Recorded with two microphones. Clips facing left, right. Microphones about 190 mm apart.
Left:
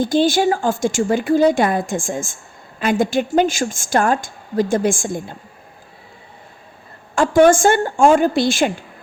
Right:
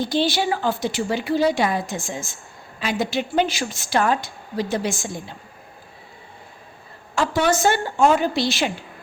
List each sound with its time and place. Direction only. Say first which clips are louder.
0.0 s a woman's voice: left 6 dB; 50° left (ahead or behind)
7.2 s a woman's voice: left 8 dB; 50° left (ahead or behind)